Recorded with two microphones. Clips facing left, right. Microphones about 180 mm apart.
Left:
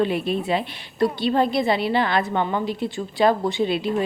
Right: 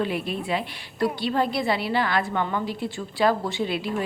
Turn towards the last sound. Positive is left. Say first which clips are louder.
# left 5 dB
turn(degrees=20)  # may be behind; listen again after turning